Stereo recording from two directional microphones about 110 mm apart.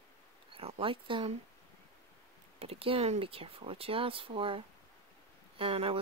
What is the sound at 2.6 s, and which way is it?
Speech, 60° right (ahead or behind).